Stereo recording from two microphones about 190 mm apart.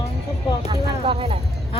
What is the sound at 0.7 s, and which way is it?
Speech, 30° right (ahead or behind).